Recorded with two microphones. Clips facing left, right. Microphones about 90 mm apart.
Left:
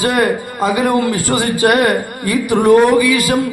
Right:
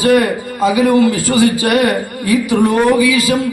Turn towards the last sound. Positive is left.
turn(degrees=50)  # may be behind; listen again after turning